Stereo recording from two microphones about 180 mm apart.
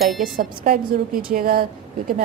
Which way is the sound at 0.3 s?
55° right (ahead or behind).